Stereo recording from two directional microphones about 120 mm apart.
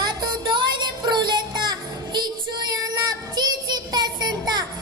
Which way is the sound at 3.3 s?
35° right (ahead or behind).